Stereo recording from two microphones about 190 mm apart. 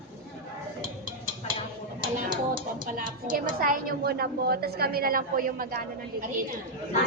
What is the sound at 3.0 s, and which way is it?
A woman's voice, 45° right (ahead or behind).